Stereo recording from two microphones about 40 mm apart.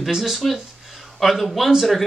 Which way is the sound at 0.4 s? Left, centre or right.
Centre.